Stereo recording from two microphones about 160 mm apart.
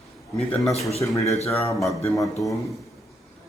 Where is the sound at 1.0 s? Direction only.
20° left (ahead or behind).